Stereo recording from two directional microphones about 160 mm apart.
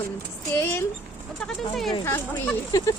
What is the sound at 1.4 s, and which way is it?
Speech, centre (ahead or behind).